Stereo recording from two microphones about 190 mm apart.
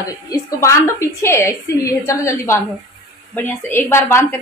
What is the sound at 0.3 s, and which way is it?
A woman's voice, 15° left (ahead or behind).